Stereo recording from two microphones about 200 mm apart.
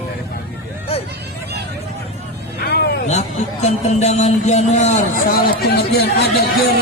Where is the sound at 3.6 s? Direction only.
35° left (ahead or behind); by 6.7 s 55° left (ahead or behind).